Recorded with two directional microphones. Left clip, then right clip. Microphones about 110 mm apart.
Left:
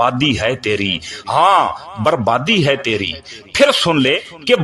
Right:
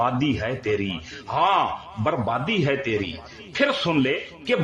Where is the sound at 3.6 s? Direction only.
50° left (ahead or behind).